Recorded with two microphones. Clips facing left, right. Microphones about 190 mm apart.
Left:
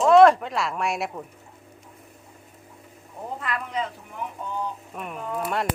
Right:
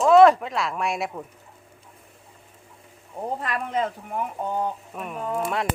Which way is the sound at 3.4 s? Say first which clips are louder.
Right 2 dB; 45° right (ahead or behind).